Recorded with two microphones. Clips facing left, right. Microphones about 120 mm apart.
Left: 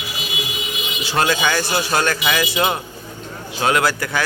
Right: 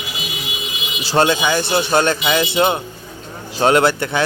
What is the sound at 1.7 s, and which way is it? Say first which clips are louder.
Speech: right 4 dB; 25° right (ahead or behind).